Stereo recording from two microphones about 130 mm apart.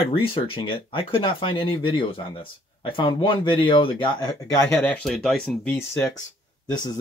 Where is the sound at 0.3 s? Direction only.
40° left (ahead or behind).